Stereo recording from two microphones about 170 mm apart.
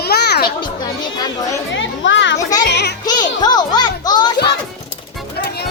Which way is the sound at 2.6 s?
85° left.